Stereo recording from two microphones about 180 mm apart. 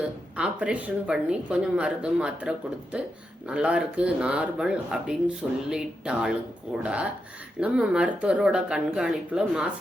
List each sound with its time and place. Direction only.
0.0 s a woman's voice: 5° right (ahead or behind)